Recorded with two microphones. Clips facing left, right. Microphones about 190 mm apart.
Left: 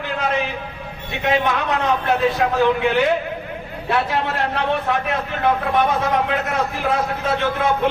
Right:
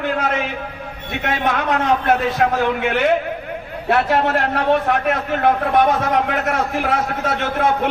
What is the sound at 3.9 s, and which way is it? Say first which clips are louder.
A man's voice: right 4 dB; 55° right (ahead or behind).